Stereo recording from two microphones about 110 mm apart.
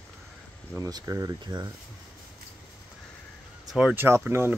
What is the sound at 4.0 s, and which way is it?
Speech, 20° right (ahead or behind).